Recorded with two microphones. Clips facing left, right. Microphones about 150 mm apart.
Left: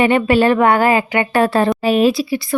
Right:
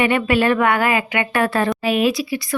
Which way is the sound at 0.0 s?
30° left (ahead or behind).